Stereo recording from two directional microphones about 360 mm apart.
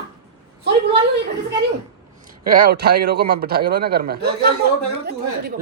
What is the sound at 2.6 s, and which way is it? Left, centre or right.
Speech, right.